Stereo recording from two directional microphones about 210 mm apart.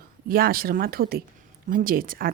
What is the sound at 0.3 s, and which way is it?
Speech, 45° right (ahead or behind).